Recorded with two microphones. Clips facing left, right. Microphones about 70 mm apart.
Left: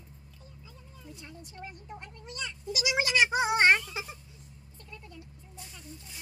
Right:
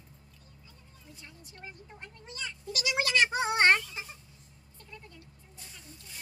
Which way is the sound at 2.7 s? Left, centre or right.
Centre.